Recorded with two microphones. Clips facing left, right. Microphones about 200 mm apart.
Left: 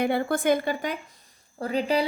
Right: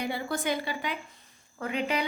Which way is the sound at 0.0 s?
55° left (ahead or behind).